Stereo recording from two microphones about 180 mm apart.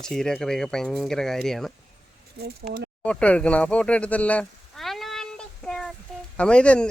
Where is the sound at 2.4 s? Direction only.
60° right (ahead or behind).